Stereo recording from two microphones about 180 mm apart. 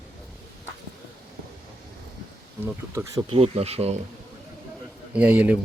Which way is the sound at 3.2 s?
35° right (ahead or behind).